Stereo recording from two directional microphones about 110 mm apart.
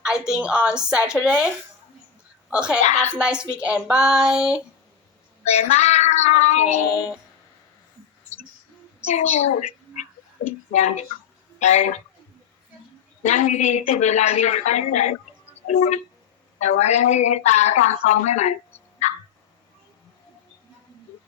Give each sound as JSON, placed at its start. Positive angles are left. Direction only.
{"t": 0.0, "sound": "a woman's voice", "side_deg": -5}
{"t": 2.5, "sound": "a woman's voice", "side_deg": -10}
{"t": 5.5, "sound": "child singing", "side_deg": 90}
{"t": 9.0, "sound": "a woman's voice", "side_deg": 80}
{"t": 13.2, "sound": "a woman's voice", "side_deg": 90}